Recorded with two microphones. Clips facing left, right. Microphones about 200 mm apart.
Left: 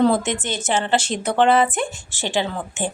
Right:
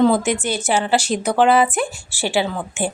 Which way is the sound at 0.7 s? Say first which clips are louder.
Right 2 dB; 10° right (ahead or behind).